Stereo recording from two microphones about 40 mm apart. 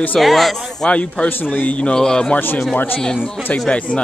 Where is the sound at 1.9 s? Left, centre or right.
Centre.